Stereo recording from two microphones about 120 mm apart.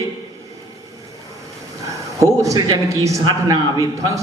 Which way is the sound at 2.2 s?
25° right (ahead or behind).